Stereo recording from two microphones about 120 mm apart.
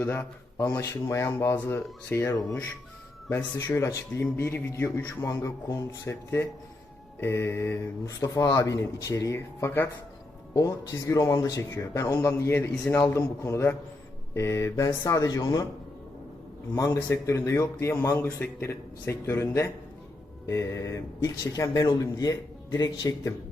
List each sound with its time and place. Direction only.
0.0 s a man's voice: 20° left (ahead or behind)
16.7 s a man's voice: 25° left (ahead or behind)